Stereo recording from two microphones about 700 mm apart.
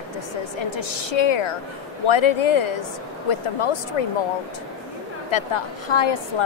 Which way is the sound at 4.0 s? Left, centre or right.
Left.